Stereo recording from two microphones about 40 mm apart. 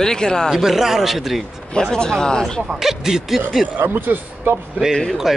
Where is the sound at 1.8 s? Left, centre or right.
Centre.